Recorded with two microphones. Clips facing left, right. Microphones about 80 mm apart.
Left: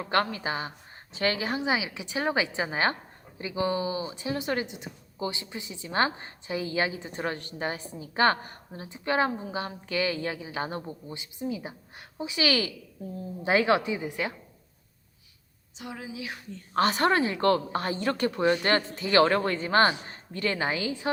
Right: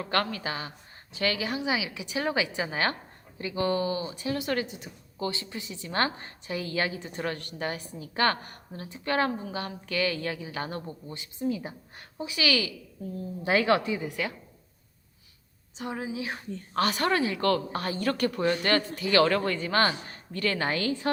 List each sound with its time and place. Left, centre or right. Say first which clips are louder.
0.0 s speech: left 2 dB; left
12.3 s speech: left 1 dB; left
13.4 s speech: left 1 dB; left
15.8 s speech: right 5 dB; right
16.7 s speech: left 3 dB; left; by 21.1 s centre